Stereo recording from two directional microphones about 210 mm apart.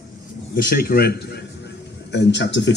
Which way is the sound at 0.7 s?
45° left (ahead or behind).